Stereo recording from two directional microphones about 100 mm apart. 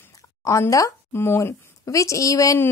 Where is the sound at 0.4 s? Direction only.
35° left (ahead or behind).